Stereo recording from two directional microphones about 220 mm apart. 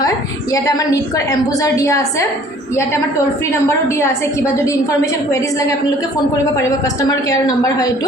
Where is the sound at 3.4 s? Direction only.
10° left (ahead or behind).